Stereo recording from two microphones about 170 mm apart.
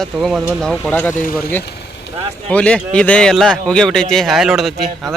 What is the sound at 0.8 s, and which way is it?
Speech, 10° left (ahead or behind).